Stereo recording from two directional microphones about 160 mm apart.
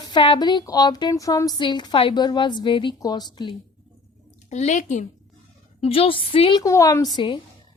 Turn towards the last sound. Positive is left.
turn(degrees=30)  # may be behind; listen again after turning